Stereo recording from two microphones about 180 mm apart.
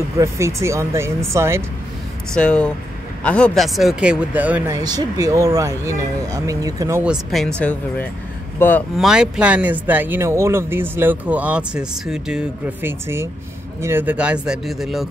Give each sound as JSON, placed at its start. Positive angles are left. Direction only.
{"t": 0.2, "sound": "speech", "side_deg": -15}
{"t": 2.3, "sound": "speech", "side_deg": 5}
{"t": 4.7, "sound": "speech", "side_deg": -20}
{"t": 7.0, "sound": "speech", "side_deg": 0}
{"t": 8.5, "sound": "speech", "side_deg": 10}
{"t": 8.9, "sound": "speech", "side_deg": -5}